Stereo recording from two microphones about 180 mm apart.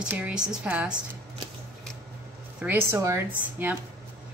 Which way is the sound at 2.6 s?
15° right (ahead or behind).